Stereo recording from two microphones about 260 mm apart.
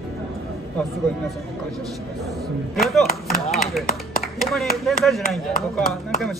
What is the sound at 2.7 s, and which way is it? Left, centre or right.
Speech, centre.